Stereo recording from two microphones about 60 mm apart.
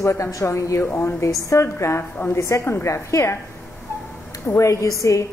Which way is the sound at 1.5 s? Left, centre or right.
Left.